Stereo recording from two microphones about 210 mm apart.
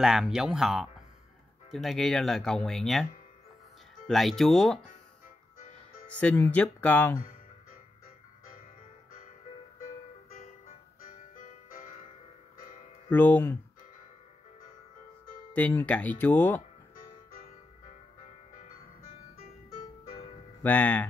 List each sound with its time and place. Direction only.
0.0 s speech: 5° right (ahead or behind)
4.1 s speech: centre (ahead or behind)
6.0 s speech: 5° left (ahead or behind)
11.1 s music: 40° left (ahead or behind)
13.1 s speech: 10° left (ahead or behind)
15.5 s speech: 10° left (ahead or behind)
16.9 s music: 40° left (ahead or behind)
20.6 s speech: 10° left (ahead or behind)